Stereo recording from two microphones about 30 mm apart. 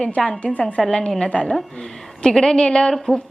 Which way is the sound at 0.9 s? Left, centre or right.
Left.